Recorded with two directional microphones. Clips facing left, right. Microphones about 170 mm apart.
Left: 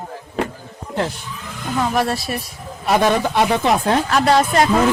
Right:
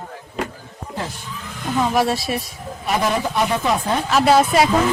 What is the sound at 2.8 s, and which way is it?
Speech, 80° left.